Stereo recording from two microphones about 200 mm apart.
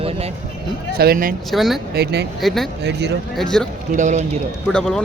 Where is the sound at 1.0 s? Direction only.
50° right (ahead or behind).